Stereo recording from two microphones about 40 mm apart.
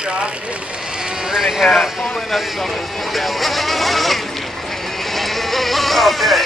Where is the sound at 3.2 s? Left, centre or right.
Centre.